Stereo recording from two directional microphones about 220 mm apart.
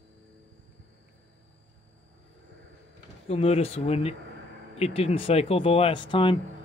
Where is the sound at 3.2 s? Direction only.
25° left (ahead or behind).